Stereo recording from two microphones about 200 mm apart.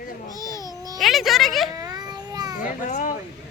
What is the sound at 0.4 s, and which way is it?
Babbling, 15° left (ahead or behind).